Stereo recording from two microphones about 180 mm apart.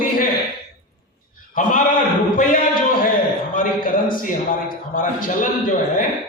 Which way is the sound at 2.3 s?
50° left (ahead or behind).